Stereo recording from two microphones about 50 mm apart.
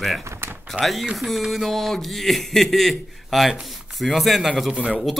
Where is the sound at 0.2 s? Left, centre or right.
Right.